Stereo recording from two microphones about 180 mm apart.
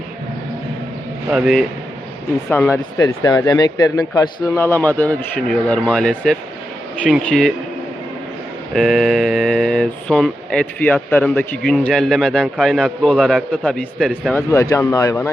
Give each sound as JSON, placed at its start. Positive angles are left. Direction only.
{"t": 1.3, "sound": "speech", "side_deg": 0}
{"t": 2.5, "sound": "speech", "side_deg": 10}
{"t": 3.0, "sound": "speech", "side_deg": 20}
{"t": 8.7, "sound": "speech", "side_deg": 0}
{"t": 14.3, "sound": "speech", "side_deg": 15}